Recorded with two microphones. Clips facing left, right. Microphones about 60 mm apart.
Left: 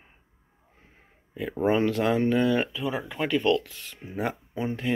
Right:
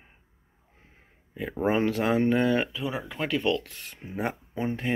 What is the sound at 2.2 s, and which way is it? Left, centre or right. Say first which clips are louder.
Speech: even; right.